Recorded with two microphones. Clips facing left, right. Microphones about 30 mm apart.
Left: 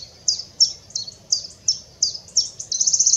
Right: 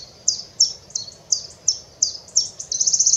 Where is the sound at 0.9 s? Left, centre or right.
Left.